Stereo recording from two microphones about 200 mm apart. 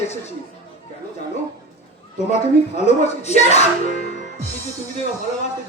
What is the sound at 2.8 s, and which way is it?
Speech, 35° left (ahead or behind).